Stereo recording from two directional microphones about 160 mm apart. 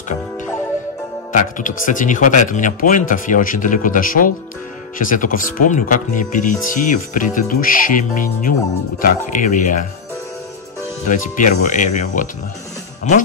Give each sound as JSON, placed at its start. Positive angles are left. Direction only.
{"t": 1.3, "sound": "speech", "side_deg": 55}
{"t": 11.1, "sound": "speech", "side_deg": 50}